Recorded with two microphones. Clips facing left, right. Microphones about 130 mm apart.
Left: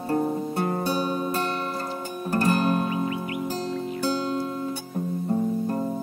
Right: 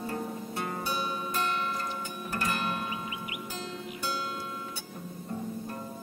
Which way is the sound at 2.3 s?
40° left (ahead or behind).